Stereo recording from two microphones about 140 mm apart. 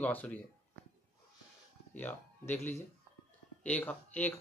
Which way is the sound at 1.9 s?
15° left (ahead or behind).